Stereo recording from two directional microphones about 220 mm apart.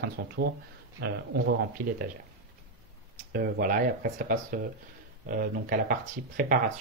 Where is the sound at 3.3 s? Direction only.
40° right (ahead or behind).